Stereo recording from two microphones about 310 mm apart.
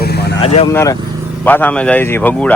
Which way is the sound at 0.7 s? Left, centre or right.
Centre.